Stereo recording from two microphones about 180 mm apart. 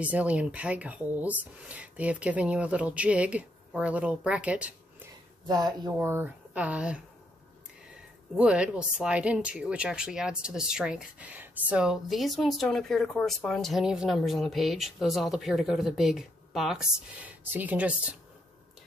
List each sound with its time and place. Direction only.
0.0 s speech: 5° right (ahead or behind)
5.5 s speech: 20° right (ahead or behind)
5.9 s speech: 10° right (ahead or behind)
8.4 s a woman's voice: 5° right (ahead or behind)